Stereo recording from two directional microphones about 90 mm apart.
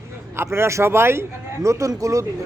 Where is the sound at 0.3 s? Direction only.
25° right (ahead or behind).